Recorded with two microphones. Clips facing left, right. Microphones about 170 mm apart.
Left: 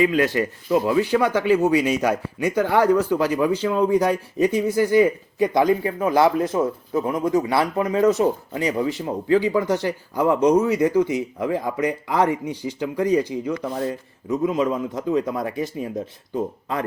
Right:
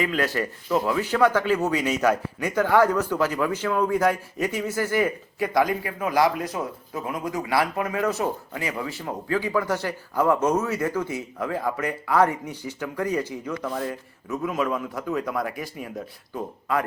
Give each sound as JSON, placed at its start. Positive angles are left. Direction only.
{"t": 0.0, "sound": "speech", "side_deg": 20}
{"t": 6.6, "sound": "speech", "side_deg": 40}
{"t": 7.5, "sound": "speech", "side_deg": 25}